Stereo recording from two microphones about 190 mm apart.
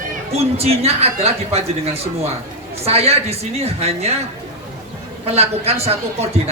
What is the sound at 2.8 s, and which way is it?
Speech, 30° right (ahead or behind).